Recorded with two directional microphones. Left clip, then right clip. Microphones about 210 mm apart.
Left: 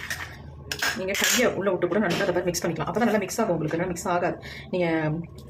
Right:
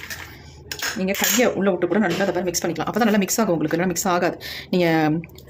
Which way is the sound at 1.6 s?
40° right (ahead or behind).